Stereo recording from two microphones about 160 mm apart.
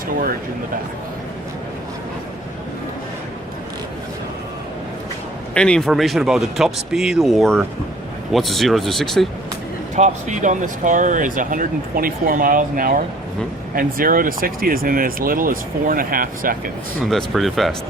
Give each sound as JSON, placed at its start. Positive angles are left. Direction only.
{"t": 5.5, "sound": "speech", "side_deg": 5}
{"t": 9.9, "sound": "speech", "side_deg": -50}
{"t": 17.0, "sound": "speech", "side_deg": 0}